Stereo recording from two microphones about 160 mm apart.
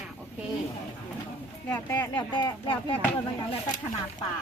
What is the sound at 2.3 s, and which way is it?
Speech, 30° left (ahead or behind).